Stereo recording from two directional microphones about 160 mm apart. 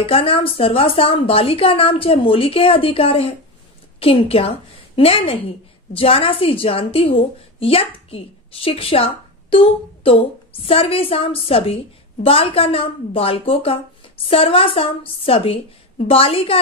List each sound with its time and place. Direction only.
0.0 s a woman's voice: 35° left (ahead or behind)